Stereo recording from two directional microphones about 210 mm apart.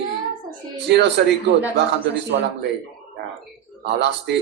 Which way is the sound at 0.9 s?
55° right (ahead or behind).